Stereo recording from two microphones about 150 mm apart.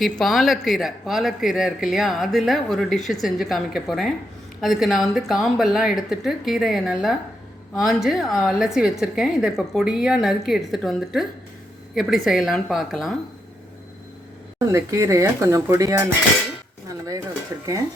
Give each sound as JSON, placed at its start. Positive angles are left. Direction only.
{"t": 0.0, "sound": "speech", "side_deg": 0}
{"t": 14.7, "sound": "speech", "side_deg": -20}